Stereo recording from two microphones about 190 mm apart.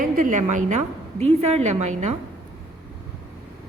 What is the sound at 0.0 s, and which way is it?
A woman's voice, 40° right (ahead or behind).